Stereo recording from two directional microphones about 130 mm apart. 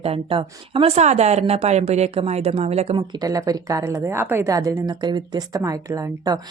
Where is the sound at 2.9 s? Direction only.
35° right (ahead or behind).